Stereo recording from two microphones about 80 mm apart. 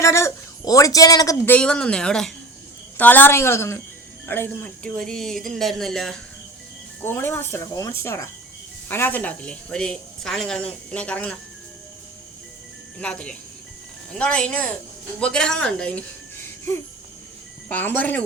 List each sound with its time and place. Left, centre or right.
0.0 s a sound: left
1.5 s speech: centre
3.0 s a woman's voice: left
4.4 s speech: centre
7.0 s speech: left
7.6 s a woman's voice: left
8.9 s speech: left
9.4 s speech: centre
13.0 s speech: centre
17.7 s speech: left